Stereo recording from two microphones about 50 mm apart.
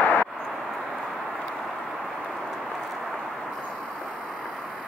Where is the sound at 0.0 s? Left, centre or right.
Left.